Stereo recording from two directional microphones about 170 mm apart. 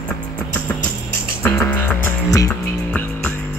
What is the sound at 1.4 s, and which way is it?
Music, 15° left (ahead or behind).